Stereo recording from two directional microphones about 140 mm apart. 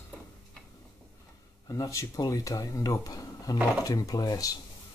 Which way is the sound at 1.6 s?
25° left (ahead or behind).